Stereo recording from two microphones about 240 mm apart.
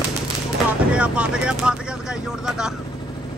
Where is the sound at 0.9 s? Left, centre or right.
Centre.